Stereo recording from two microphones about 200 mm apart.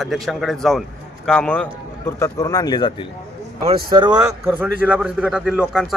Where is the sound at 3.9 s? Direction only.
25° right (ahead or behind).